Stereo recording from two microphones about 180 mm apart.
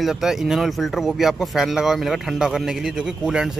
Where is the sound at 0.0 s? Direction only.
Centre (ahead or behind).